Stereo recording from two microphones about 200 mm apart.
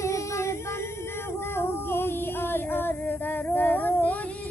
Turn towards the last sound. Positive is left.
turn(degrees=10)  # may be behind; listen again after turning